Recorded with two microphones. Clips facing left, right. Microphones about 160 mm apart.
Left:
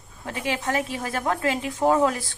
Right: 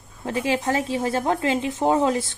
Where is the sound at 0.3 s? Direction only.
30° right (ahead or behind).